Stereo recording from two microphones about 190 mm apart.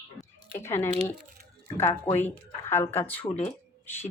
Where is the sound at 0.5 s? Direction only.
15° left (ahead or behind).